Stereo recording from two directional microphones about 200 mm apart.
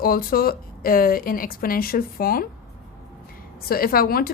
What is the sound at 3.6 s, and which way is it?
Speech, 50° left (ahead or behind).